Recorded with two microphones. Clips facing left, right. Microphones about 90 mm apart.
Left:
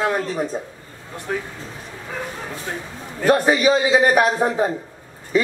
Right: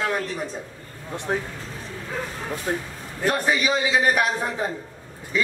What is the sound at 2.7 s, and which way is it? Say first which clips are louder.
Speech: right 4 dB; 30° right (ahead or behind).